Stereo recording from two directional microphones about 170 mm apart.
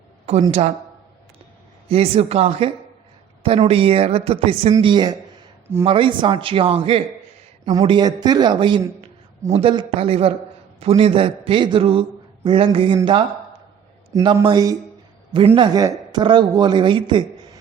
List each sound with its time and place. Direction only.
1.9 s a man's voice: 35° right (ahead or behind)
14.1 s speech: 20° right (ahead or behind)